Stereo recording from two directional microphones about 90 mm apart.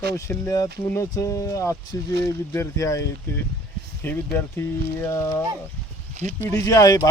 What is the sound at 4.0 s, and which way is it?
Speech, 25° left (ahead or behind).